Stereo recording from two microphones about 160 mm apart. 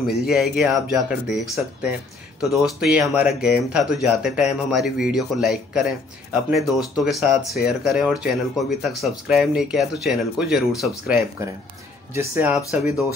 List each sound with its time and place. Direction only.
0.0 s speech: 70° left (ahead or behind)
0.3 s speech: centre (ahead or behind)
7.1 s speech: centre (ahead or behind)
12.1 s speech: 15° right (ahead or behind)